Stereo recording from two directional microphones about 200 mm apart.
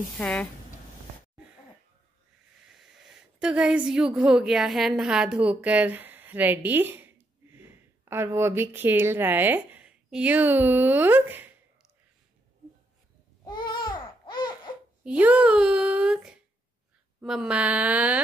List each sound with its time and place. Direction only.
0.2 s speech: 5° left (ahead or behind)
2.7 s a woman's voice: centre (ahead or behind)
13.5 s baby cry: 25° left (ahead or behind)
15.0 s speech: 5° right (ahead or behind)